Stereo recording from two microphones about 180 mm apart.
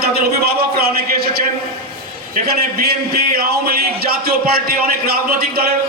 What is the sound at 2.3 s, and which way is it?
A man's voice, 55° right (ahead or behind).